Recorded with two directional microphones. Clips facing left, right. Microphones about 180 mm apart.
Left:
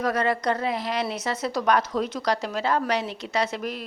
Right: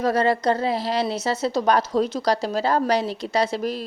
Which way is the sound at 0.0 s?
30° right (ahead or behind).